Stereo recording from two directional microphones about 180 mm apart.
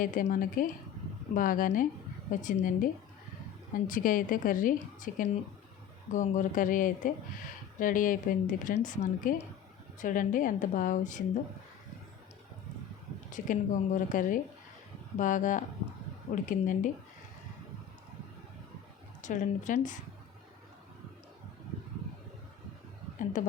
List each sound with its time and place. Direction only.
0.0 s a woman's voice: 50° left (ahead or behind)
13.3 s a woman's voice: 45° left (ahead or behind)
19.2 s a woman's voice: 45° left (ahead or behind)
23.4 s a woman's voice: 45° left (ahead or behind)